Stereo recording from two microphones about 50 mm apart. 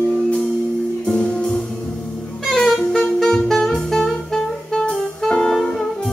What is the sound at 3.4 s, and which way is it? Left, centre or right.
Music, centre.